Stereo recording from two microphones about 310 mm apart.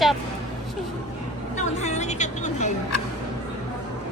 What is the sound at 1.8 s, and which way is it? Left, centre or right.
Speech, left.